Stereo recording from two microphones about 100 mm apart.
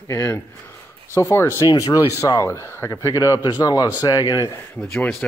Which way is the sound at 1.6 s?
40° left (ahead or behind).